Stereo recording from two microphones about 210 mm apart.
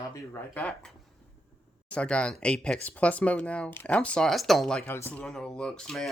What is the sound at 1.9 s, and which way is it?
Speech, 5° left (ahead or behind).